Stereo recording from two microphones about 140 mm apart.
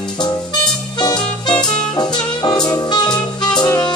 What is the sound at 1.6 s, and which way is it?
Music, 30° left (ahead or behind).